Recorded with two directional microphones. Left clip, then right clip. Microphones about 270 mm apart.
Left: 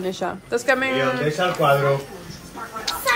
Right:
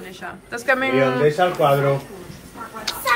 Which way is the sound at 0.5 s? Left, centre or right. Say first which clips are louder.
Right 1 dB; centre.